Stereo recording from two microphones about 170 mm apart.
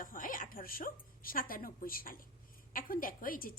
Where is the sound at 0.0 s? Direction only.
55° left (ahead or behind).